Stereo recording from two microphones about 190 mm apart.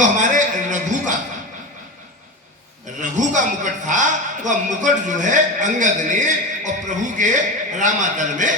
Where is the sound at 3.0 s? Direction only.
40° right (ahead or behind).